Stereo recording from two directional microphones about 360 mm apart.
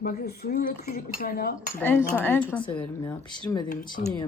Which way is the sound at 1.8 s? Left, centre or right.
Centre.